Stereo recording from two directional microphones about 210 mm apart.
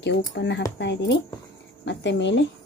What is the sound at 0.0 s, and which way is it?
Speech, 50° left (ahead or behind).